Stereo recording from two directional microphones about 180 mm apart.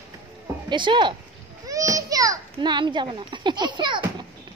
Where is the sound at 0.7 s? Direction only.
25° right (ahead or behind).